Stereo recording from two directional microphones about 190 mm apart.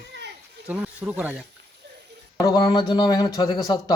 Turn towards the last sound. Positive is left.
turn(degrees=20)  # may be behind; listen again after turning